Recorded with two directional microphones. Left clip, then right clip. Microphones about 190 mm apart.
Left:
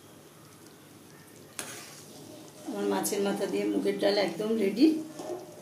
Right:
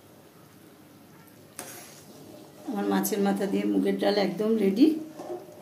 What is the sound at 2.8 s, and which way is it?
Speech, 55° right (ahead or behind).